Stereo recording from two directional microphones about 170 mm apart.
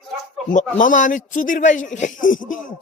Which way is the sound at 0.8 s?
50° left (ahead or behind).